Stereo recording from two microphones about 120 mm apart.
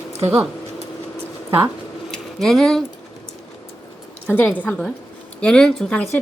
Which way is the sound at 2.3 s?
Centre (ahead or behind).